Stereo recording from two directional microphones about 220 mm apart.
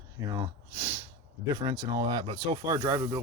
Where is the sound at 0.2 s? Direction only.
15° right (ahead or behind).